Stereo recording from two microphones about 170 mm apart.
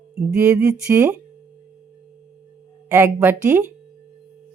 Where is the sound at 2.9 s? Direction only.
15° right (ahead or behind).